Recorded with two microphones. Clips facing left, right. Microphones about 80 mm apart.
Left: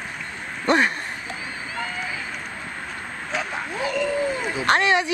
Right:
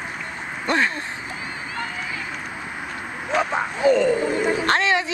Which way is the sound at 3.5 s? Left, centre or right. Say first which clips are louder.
Right 9 dB; centre.